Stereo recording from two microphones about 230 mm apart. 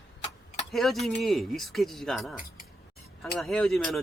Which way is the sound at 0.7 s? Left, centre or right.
Centre.